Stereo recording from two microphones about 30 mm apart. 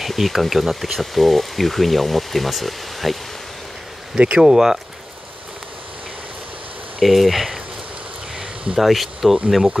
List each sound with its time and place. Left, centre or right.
0.0 s speech: centre
4.4 s speech: centre
7.0 s speech: centre
8.7 s speech: centre